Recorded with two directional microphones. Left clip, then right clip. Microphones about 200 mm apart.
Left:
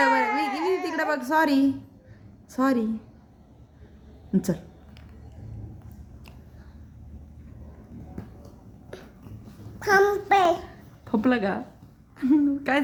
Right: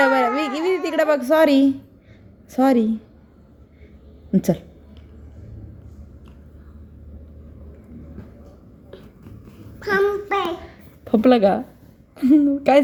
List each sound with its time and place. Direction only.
0.0 s a sound: 10° right (ahead or behind)
2.5 s a woman's voice: 10° right (ahead or behind)
4.3 s a woman's voice: 10° right (ahead or behind)
9.8 s child singing: 30° left (ahead or behind)
10.2 s a child's voice: 10° left (ahead or behind)
11.0 s a woman's voice: 10° right (ahead or behind)